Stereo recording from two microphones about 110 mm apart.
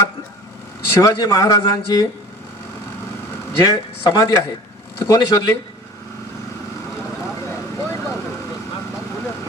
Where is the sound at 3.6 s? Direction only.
40° left (ahead or behind).